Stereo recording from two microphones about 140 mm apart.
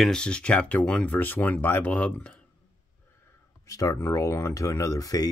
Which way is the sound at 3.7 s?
25° left (ahead or behind).